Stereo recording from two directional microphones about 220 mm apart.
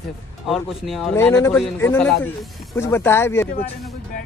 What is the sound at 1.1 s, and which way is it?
A man's voice, 10° left (ahead or behind).